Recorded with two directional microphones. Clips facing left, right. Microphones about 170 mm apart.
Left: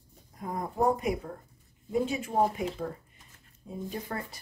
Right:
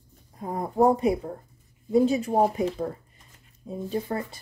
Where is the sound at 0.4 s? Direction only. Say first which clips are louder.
Right 7 dB; 30° right (ahead or behind).